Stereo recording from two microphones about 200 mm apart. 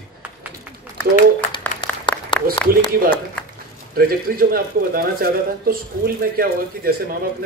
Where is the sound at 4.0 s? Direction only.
50° right (ahead or behind).